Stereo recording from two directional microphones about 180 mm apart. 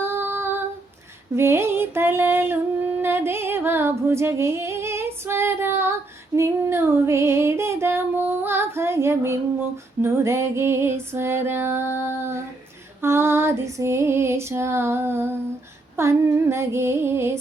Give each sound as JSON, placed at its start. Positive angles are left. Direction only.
{"t": 0.0, "sound": "female singing", "side_deg": -10}
{"t": 3.0, "sound": "a sound", "side_deg": -15}
{"t": 10.0, "sound": "female singing", "side_deg": -15}